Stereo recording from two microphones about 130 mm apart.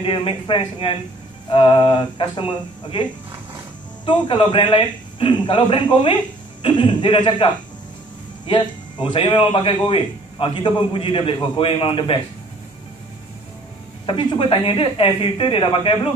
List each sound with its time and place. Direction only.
0.0 s a man's voice: 40° left (ahead or behind)
14.0 s speech: 40° left (ahead or behind)